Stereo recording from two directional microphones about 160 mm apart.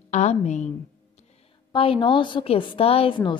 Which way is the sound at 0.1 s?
45° left (ahead or behind).